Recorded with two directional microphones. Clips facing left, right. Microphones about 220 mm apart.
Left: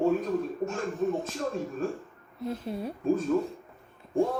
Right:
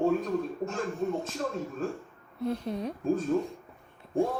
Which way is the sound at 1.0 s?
Centre (ahead or behind).